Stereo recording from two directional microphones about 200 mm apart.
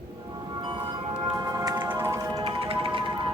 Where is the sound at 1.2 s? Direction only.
20° right (ahead or behind).